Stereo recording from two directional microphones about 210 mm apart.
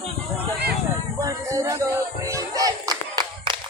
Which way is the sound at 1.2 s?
15° right (ahead or behind).